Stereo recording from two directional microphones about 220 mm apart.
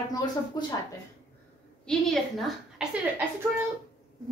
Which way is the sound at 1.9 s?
Centre (ahead or behind).